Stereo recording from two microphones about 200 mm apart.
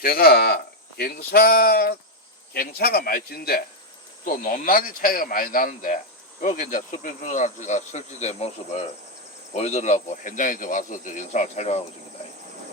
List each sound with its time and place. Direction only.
0.0 s speech: 50° left (ahead or behind)
6.4 s cricket: 40° left (ahead or behind)